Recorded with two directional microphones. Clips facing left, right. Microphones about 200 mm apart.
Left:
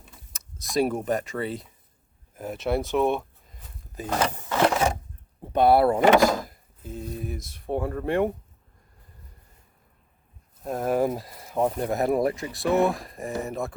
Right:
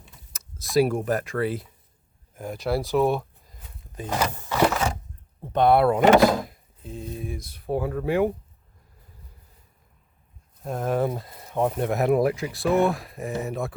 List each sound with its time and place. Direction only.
0.3 s speech: centre (ahead or behind)
2.9 s a sound: centre (ahead or behind)
5.4 s speech: 10° left (ahead or behind)
10.6 s speech: 5° left (ahead or behind)
11.2 s speech: 25° right (ahead or behind)
11.4 s speech: 5° left (ahead or behind)